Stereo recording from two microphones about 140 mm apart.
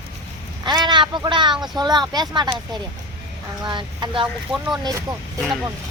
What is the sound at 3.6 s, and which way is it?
Speech, 35° right (ahead or behind).